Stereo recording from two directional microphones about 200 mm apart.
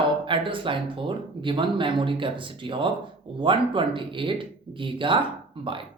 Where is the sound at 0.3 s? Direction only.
25° right (ahead or behind).